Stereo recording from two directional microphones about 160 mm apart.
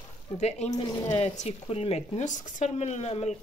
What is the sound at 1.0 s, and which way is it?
Speech, 45° left (ahead or behind).